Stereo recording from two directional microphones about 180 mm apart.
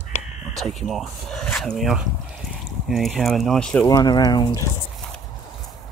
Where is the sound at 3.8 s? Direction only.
20° left (ahead or behind).